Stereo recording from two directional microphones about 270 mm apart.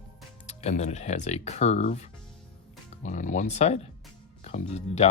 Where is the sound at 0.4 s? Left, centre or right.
Left.